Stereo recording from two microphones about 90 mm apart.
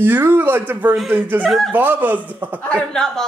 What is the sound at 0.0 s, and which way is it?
Speech, 25° right (ahead or behind).